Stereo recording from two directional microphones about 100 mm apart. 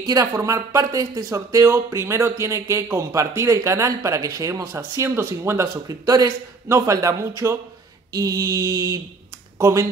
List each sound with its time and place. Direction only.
0.0 s speech: 35° right (ahead or behind)